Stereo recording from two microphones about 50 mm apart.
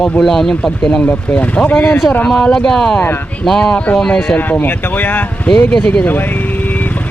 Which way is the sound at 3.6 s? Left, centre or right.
Left.